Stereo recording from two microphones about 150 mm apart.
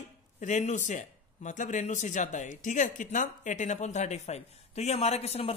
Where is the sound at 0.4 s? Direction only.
50° left (ahead or behind).